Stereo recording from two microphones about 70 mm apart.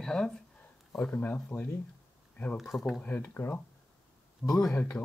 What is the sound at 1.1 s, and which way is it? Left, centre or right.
Speech, left.